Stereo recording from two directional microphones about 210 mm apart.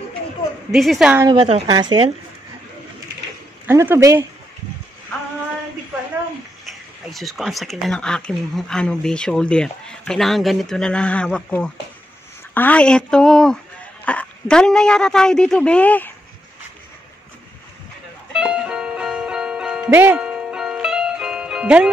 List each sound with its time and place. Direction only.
0.7 s speech: centre (ahead or behind)
1.2 s speech: 20° right (ahead or behind)
3.6 s speech: 10° right (ahead or behind)
7.1 s speech: centre (ahead or behind)
18.3 s music: 5° right (ahead or behind)